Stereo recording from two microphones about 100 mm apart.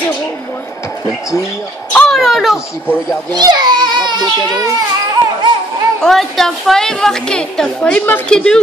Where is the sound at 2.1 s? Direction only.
Centre (ahead or behind).